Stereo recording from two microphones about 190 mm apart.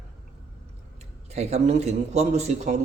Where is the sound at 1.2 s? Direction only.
35° right (ahead or behind).